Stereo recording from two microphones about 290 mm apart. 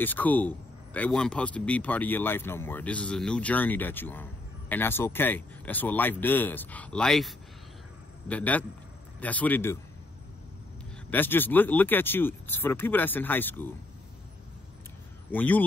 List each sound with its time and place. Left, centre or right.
0.0 s a man's voice: centre
11.1 s speech: centre
15.3 s a man's voice: centre